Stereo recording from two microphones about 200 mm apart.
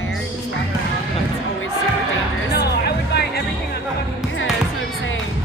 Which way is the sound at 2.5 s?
55° left (ahead or behind).